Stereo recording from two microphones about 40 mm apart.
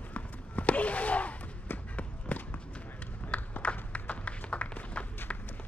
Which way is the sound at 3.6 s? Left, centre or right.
Left.